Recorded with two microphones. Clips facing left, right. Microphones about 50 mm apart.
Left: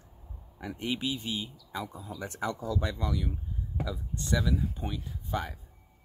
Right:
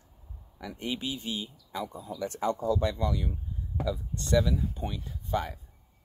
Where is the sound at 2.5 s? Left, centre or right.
Right.